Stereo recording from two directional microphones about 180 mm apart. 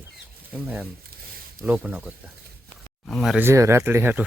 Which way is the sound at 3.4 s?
15° right (ahead or behind).